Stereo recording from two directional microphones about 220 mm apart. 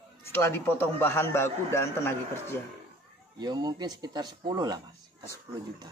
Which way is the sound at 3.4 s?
20° right (ahead or behind).